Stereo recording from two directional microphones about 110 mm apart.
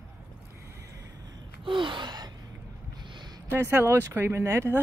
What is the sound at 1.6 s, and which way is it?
Gasp, 50° right (ahead or behind).